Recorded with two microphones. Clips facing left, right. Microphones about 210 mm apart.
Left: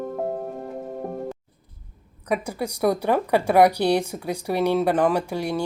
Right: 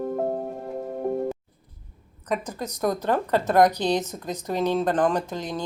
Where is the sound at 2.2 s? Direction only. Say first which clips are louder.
Left 3 dB; 10° left (ahead or behind).